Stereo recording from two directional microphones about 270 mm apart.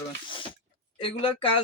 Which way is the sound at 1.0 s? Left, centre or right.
Centre.